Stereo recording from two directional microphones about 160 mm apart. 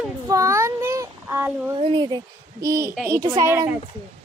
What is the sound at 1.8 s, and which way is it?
Speech, 35° right (ahead or behind).